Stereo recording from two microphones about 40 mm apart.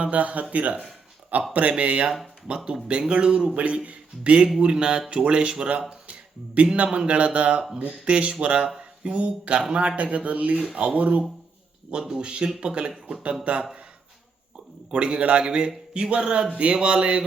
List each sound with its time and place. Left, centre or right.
0.0 s a man's voice: right
1.7 s a man's voice: right
3.5 s a man's voice: right
5.9 s a sound: right
6.7 s a man's voice: right
11.9 s a man's voice: right
14.8 s a man's voice: right